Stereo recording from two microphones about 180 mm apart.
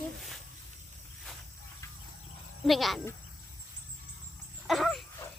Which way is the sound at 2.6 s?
Centre (ahead or behind).